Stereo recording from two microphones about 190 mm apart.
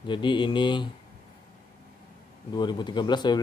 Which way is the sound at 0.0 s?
25° left (ahead or behind).